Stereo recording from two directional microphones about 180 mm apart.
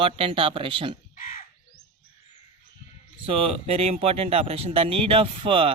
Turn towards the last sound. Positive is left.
turn(degrees=-30)  # may be behind; listen again after turning